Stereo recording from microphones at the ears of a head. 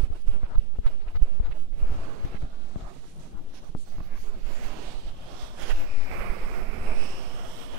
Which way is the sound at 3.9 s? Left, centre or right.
Right.